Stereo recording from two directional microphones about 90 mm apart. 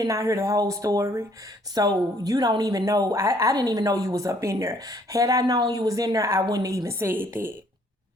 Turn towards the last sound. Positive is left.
turn(degrees=-25)  # may be behind; listen again after turning